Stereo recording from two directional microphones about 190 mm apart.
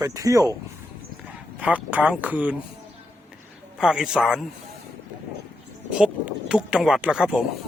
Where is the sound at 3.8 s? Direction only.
5° right (ahead or behind).